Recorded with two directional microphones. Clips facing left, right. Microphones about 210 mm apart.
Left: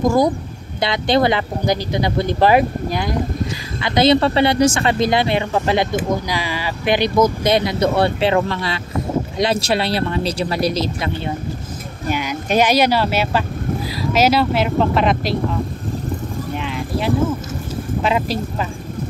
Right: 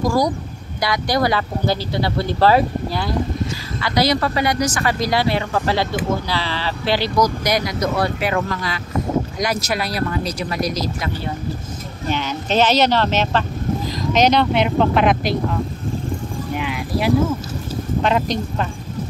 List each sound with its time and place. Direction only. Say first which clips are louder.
0.0 s speech: left 3 dB; 20° left (ahead or behind)
12.1 s speech: left 2 dB; 10° left (ahead or behind)
16.5 s clip-clop: right 2 dB; 5° right (ahead or behind)
18.0 s speech: even; 5° left (ahead or behind)